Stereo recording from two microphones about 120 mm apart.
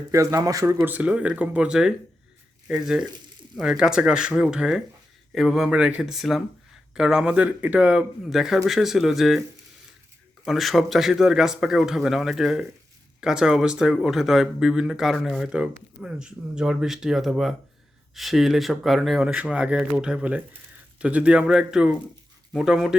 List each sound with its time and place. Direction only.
0.1 s speech: 25° right (ahead or behind)
0.8 s speech: 10° right (ahead or behind)
10.4 s speech: centre (ahead or behind)